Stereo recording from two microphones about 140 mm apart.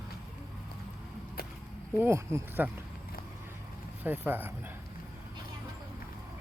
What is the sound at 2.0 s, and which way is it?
Speech, 20° right (ahead or behind).